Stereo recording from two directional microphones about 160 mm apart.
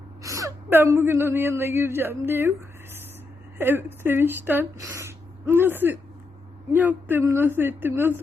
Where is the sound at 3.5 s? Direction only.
15° right (ahead or behind).